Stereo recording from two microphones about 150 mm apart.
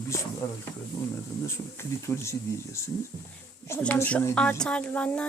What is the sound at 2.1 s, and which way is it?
Speech, 15° left (ahead or behind).